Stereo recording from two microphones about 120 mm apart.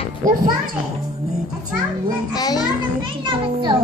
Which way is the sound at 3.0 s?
45° right (ahead or behind).